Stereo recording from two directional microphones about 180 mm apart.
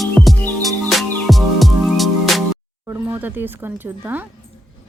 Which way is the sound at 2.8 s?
10° right (ahead or behind).